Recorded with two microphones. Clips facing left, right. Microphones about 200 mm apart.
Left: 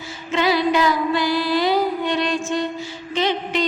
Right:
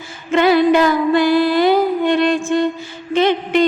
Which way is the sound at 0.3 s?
55° right (ahead or behind).